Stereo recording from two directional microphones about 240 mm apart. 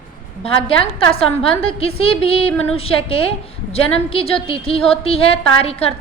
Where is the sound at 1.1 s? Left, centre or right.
Left.